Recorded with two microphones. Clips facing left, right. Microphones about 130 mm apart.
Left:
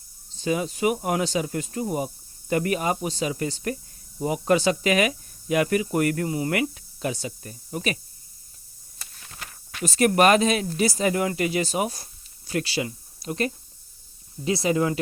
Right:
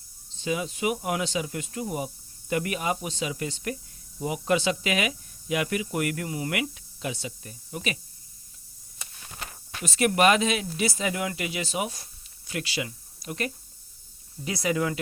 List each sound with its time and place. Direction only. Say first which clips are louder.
0.3 s speech: left 4 dB; 40° left (ahead or behind)
9.8 s speech: left 3 dB; 40° left (ahead or behind)